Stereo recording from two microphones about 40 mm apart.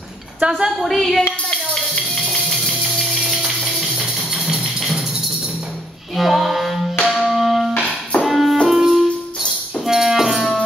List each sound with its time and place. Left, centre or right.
0.4 s a woman's voice: right
0.7 s a woman's voice: centre
2.2 s music: centre
6.1 s music: centre
7.7 s music: left
8.2 s music: centre